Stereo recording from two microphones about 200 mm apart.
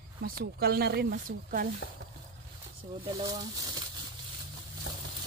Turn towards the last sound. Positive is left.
turn(degrees=-20)  # may be behind; listen again after turning